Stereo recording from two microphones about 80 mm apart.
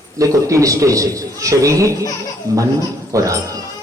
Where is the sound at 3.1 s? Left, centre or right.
Right.